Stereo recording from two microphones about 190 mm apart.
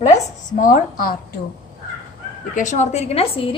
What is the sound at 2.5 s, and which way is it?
A woman's voice, 40° left (ahead or behind).